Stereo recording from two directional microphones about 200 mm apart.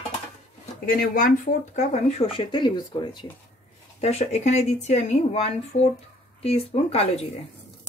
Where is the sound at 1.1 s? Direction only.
40° left (ahead or behind); by 3.3 s 20° left (ahead or behind).